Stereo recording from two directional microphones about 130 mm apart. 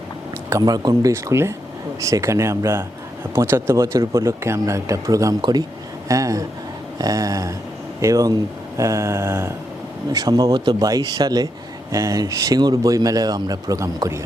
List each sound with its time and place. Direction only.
0.6 s speech: 30° right (ahead or behind)
10.1 s speech: 30° right (ahead or behind)